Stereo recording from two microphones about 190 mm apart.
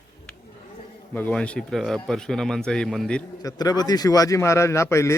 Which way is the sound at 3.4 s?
20° left (ahead or behind).